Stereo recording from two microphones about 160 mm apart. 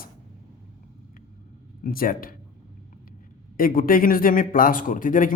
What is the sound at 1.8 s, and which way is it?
Speech, 65° left (ahead or behind).